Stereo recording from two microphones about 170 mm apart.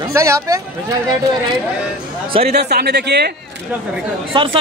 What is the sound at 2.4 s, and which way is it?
Speech, 70° right (ahead or behind).